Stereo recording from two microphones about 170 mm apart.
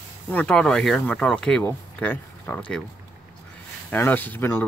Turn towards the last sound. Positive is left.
turn(degrees=10)  # may be behind; listen again after turning